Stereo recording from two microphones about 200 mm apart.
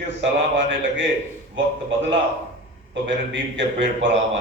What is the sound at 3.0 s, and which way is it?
A man's voice, 65° right (ahead or behind).